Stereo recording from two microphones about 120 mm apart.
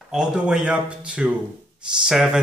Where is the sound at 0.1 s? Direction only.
5° right (ahead or behind).